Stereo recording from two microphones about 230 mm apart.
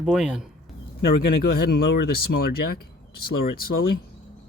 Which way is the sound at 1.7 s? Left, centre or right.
Left.